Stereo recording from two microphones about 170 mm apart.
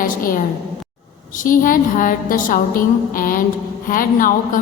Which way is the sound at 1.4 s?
55° left (ahead or behind).